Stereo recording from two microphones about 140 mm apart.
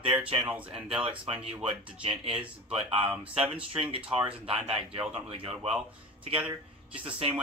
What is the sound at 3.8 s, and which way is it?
Speech, 40° right (ahead or behind).